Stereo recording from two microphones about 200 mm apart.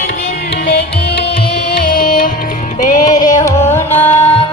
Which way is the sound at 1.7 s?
50° left (ahead or behind).